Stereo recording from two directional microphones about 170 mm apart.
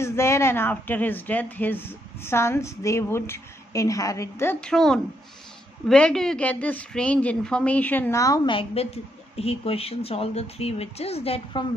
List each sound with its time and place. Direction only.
0.0 s speech: 15° left (ahead or behind)
8.5 s a woman's voice: 35° left (ahead or behind)